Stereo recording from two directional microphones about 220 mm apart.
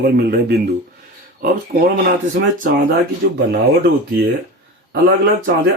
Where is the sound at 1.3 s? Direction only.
45° right (ahead or behind).